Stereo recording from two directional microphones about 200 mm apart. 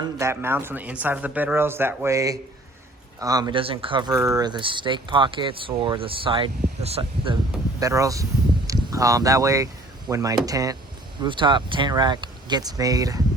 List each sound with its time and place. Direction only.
0.0 s speech: 15° right (ahead or behind)
7.8 s speech: 15° right (ahead or behind)